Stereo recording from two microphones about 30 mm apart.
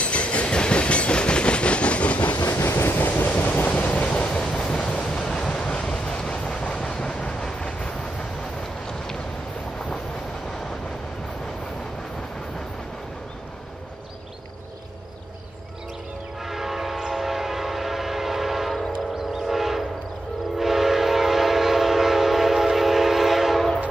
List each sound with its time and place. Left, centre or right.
0.0 s train: left
2.2 s train: left
3.3 s vehicle: left
4.1 s train: left
5.1 s waves: centre
5.8 s vehicle: left
6.6 s train: left
8.8 s vehicle: left
16.4 s train: centre
19.1 s train: centre
19.5 s train: centre